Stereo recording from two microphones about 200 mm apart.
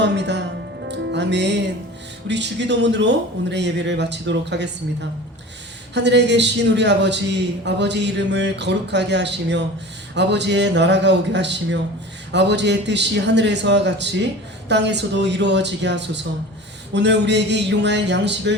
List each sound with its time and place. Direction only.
0.0 s speech: 60° right (ahead or behind)
0.9 s music: 60° right (ahead or behind)
2.2 s a man's voice: 60° right (ahead or behind)
5.9 s a man's voice: 60° right (ahead or behind)